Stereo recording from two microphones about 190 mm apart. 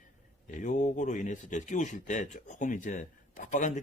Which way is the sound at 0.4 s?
40° left (ahead or behind).